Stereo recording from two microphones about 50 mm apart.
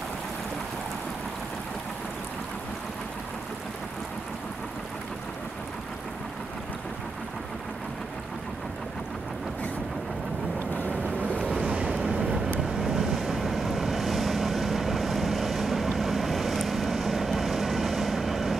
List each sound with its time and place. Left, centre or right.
10.9 s boat: right
11.5 s boat: centre
12.8 s vehicle: centre